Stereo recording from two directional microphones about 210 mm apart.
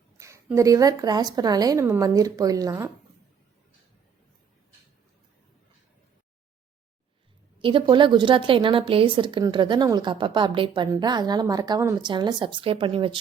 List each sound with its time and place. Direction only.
0.2 s a woman's voice: 15° right (ahead or behind)
7.6 s speech: 25° right (ahead or behind)